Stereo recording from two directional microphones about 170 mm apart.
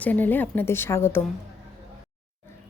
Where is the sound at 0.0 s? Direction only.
10° left (ahead or behind).